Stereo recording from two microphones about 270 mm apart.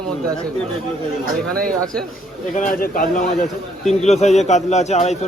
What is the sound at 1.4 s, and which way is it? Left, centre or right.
Speech, centre.